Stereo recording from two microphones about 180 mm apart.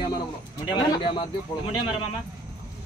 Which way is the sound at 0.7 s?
25° left (ahead or behind).